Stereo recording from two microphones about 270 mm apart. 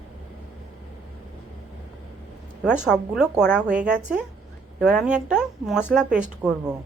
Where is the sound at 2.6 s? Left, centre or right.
Centre.